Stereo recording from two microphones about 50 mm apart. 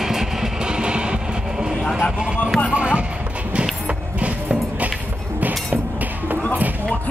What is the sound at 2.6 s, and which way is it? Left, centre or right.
Music, right.